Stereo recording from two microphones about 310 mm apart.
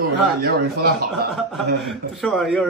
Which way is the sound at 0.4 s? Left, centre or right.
Right.